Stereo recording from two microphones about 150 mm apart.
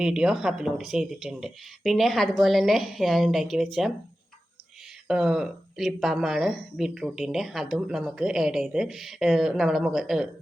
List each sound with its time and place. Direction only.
0.0 s speech: 5° right (ahead or behind)
5.0 s speech: 5° right (ahead or behind)